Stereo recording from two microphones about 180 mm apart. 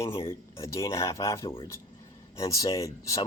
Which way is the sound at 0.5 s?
15° left (ahead or behind).